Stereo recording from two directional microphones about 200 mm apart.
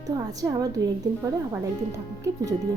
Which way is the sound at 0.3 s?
20° right (ahead or behind).